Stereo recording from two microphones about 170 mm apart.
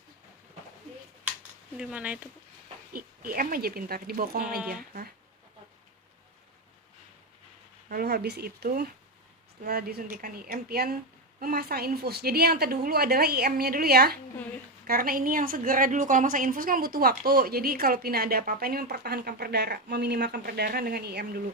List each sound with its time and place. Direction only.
1.8 s speech: 10° right (ahead or behind)
2.9 s a woman's voice: 60° right (ahead or behind)
7.9 s a woman's voice: 65° right (ahead or behind)